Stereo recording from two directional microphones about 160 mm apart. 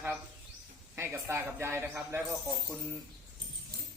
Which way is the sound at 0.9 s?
15° right (ahead or behind).